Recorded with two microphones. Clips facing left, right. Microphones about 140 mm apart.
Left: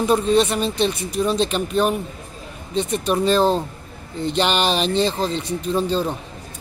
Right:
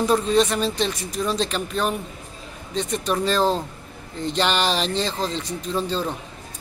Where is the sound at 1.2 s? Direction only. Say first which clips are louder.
Left 4 dB; 25° left (ahead or behind).